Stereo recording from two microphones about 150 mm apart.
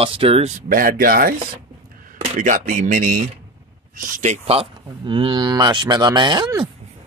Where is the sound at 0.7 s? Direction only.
65° right (ahead or behind).